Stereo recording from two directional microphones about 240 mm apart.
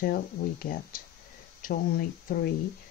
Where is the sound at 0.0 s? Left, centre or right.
Left.